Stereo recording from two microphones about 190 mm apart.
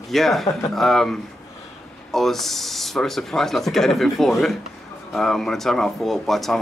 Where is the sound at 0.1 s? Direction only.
Centre (ahead or behind).